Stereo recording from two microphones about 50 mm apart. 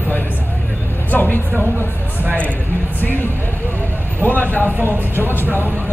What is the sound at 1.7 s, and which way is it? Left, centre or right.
Speech, left.